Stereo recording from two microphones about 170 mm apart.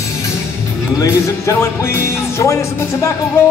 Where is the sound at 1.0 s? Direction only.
15° left (ahead or behind).